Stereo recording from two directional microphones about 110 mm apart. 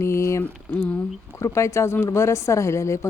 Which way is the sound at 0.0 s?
25° left (ahead or behind).